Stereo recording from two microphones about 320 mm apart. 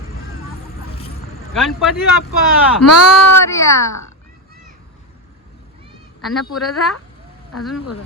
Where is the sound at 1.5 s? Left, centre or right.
Centre.